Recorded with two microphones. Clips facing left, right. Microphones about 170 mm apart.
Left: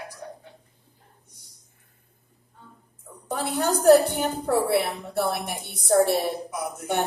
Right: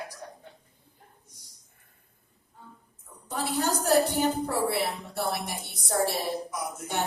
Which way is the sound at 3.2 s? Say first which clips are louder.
Left 3 dB; 55° left (ahead or behind).